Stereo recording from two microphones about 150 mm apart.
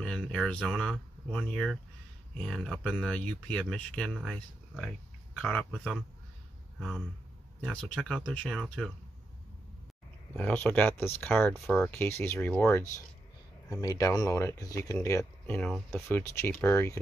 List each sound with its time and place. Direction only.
0.0 s speech: 5° left (ahead or behind)
7.6 s speech: 5° left (ahead or behind)
10.3 s speech: 10° left (ahead or behind)
11.5 s speech: centre (ahead or behind)
11.9 s speech: 15° left (ahead or behind)